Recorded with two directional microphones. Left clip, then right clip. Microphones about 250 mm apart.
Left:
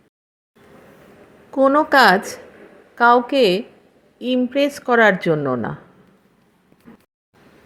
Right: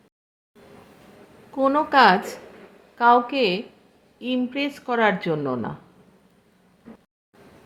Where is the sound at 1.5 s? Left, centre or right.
Centre.